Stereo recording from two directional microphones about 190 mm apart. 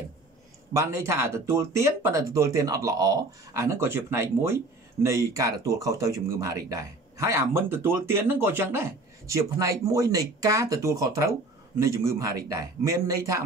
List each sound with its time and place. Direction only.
0.7 s speech: 15° right (ahead or behind)